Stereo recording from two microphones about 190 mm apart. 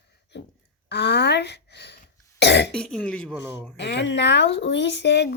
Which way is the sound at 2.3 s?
60° left (ahead or behind).